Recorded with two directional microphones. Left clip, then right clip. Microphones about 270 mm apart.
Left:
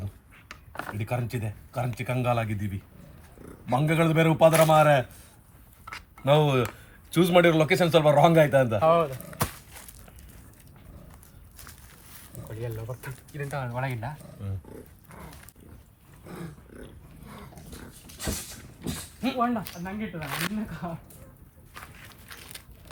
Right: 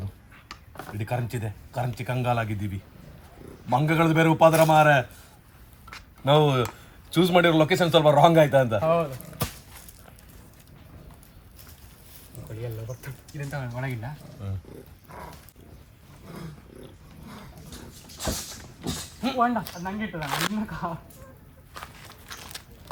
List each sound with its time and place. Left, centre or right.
0.9 s speech: centre
5.9 s a sound: centre
7.1 s speech: centre
8.8 s speech: centre
12.5 s speech: centre
18.9 s speech: centre
21.7 s walk: centre